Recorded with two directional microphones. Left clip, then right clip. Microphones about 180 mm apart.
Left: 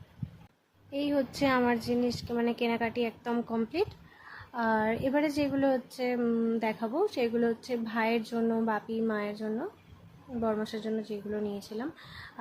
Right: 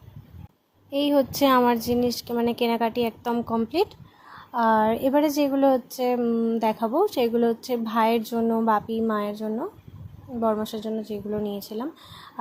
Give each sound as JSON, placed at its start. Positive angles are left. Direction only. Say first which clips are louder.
{"t": 0.9, "sound": "speech", "louder": "right 9 dB", "side_deg": -30}
{"t": 10.4, "sound": "speech", "louder": "right 7 dB", "side_deg": -20}